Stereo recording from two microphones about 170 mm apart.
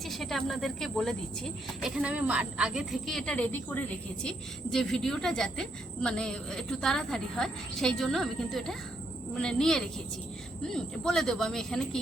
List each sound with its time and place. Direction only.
0.0 s speech: centre (ahead or behind)